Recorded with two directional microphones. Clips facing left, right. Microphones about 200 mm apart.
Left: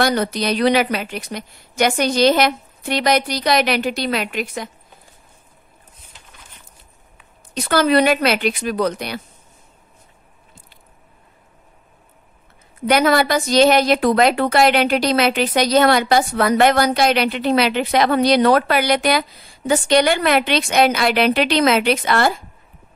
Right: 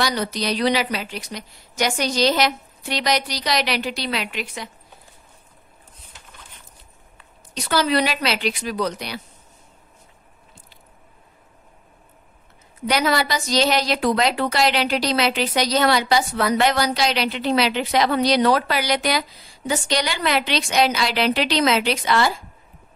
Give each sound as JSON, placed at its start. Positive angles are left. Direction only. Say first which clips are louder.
{"t": 0.0, "sound": "a woman's voice", "louder": "left 5 dB", "side_deg": 55}
{"t": 7.5, "sound": "a woman's voice", "louder": "left 5 dB", "side_deg": 55}
{"t": 12.8, "sound": "a woman's voice", "louder": "left 5 dB", "side_deg": 55}